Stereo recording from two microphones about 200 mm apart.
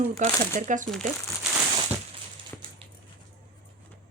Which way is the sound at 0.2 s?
40° right (ahead or behind).